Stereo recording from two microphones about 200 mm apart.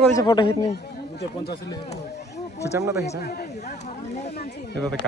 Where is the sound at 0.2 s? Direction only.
20° left (ahead or behind).